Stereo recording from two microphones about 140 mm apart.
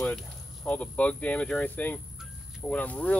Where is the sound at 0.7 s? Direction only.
10° left (ahead or behind).